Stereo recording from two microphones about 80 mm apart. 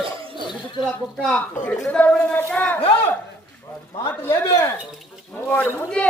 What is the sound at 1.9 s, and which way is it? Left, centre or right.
Speech, centre.